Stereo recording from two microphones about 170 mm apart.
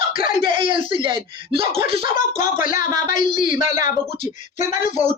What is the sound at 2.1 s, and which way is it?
Speech, 50° left (ahead or behind).